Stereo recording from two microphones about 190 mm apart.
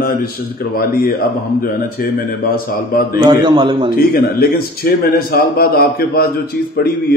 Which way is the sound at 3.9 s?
55° left (ahead or behind).